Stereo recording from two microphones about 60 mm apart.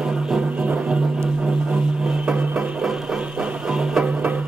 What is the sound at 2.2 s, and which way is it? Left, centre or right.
Music, centre.